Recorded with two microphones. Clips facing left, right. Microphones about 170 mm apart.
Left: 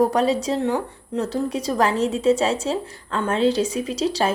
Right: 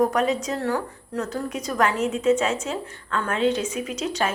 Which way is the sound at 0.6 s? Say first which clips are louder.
Left 3 dB; 20° left (ahead or behind).